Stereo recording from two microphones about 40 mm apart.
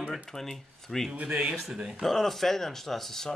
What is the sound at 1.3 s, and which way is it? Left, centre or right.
Speech, centre.